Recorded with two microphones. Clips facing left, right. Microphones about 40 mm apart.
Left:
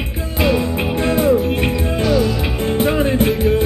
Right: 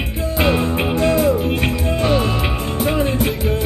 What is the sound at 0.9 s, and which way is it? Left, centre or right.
Music, left.